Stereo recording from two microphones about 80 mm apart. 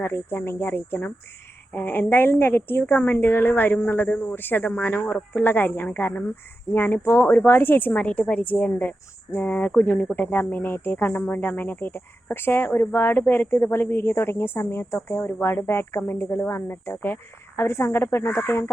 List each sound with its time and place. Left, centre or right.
0.0 s a woman's voice: left